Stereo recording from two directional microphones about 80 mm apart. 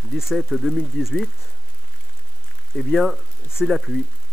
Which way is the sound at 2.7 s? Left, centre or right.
Centre.